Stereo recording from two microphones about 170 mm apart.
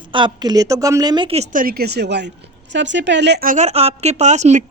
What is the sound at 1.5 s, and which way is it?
A woman's voice, 60° right (ahead or behind).